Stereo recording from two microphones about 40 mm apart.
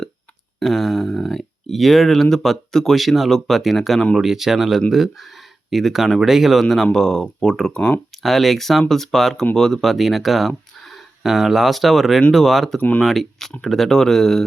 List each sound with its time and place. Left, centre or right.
0.6 s speech: centre
4.2 s speech: centre
7.7 s speech: left
8.2 s speech: centre
9.8 s speech: centre
11.2 s speech: centre